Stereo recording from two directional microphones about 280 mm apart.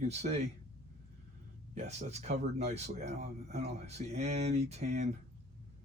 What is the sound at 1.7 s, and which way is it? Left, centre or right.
Speech, right.